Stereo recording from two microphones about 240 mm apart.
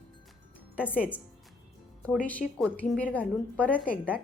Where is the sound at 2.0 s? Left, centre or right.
Centre.